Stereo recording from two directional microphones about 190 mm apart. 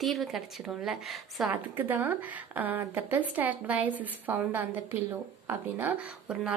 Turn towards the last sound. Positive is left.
turn(degrees=-5)  # may be behind; listen again after turning